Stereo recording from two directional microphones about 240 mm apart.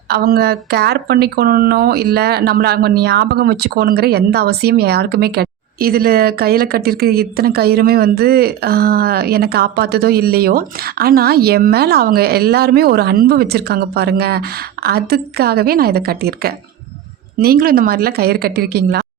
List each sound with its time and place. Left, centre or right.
0.1 s speech: right